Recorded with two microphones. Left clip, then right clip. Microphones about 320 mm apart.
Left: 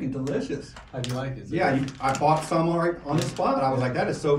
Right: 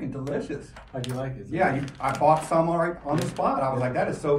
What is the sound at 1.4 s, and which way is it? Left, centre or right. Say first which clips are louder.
Speech: even; centre.